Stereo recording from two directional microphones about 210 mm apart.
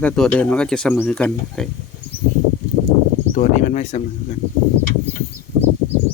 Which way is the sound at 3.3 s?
35° left (ahead or behind).